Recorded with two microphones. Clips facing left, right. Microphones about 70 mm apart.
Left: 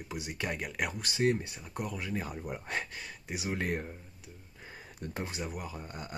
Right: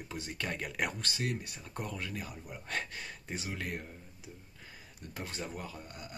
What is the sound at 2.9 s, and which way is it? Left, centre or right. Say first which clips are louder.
Speech: left 1 dB; centre.